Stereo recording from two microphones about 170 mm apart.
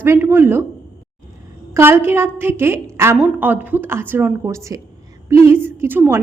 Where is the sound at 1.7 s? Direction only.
15° right (ahead or behind).